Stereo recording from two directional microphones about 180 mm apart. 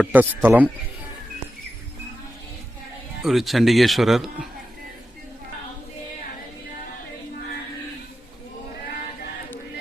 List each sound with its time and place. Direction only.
0.0 s speech: 10° right (ahead or behind)
3.2 s a man's voice: centre (ahead or behind)